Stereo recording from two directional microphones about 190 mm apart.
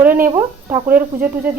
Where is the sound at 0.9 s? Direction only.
10° right (ahead or behind).